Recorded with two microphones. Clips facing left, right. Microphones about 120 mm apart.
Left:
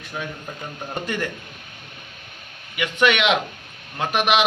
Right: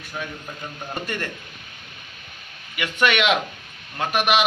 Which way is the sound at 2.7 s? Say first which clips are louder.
Left 2 dB; 20° left (ahead or behind).